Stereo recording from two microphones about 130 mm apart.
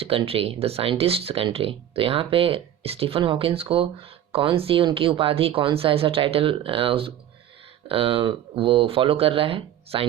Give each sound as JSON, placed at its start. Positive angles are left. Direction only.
{"t": 0.0, "sound": "speech", "side_deg": -45}